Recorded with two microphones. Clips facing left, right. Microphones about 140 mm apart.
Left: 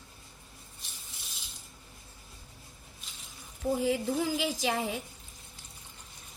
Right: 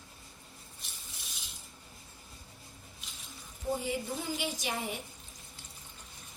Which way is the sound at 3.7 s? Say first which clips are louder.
Left 7 dB; 90° left.